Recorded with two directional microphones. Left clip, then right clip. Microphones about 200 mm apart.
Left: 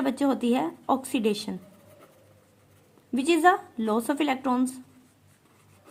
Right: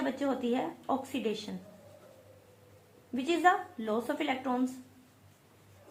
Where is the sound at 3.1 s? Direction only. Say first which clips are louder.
Left 6 dB; 50° left (ahead or behind).